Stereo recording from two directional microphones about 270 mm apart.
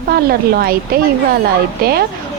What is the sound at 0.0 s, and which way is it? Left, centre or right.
A woman's voice, right.